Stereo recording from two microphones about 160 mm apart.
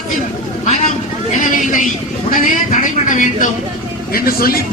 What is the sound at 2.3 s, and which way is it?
Speech, 55° left (ahead or behind).